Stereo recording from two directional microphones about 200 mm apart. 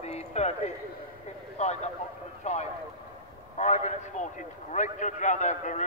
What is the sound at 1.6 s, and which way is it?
A man's voice, 35° left (ahead or behind).